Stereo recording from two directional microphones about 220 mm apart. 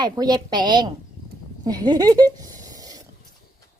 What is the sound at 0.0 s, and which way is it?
A woman's voice, 20° right (ahead or behind).